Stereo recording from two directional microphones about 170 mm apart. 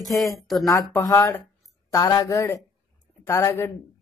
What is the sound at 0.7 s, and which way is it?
Speech, 20° left (ahead or behind).